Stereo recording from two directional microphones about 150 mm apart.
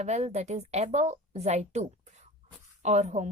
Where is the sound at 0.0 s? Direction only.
45° right (ahead or behind).